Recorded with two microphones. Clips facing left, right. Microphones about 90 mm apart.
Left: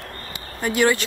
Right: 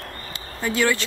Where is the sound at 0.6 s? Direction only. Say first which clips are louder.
Left 3 dB; 15° left (ahead or behind).